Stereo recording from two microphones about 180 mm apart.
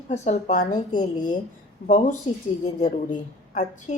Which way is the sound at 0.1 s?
40° left (ahead or behind).